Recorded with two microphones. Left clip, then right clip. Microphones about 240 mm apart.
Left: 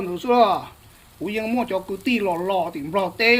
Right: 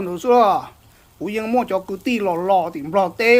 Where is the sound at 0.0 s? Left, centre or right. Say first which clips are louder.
Right 3 dB; centre.